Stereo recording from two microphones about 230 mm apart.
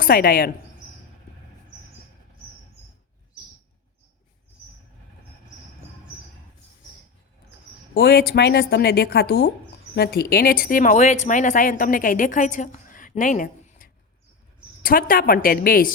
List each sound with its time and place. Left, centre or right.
0.0 s speech: left
7.9 s speech: left